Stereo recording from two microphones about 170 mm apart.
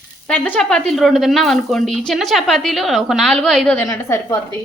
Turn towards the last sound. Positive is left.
turn(degrees=20)  # may be behind; listen again after turning